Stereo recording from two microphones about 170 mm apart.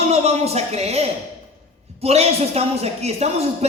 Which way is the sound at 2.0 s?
40° right (ahead or behind).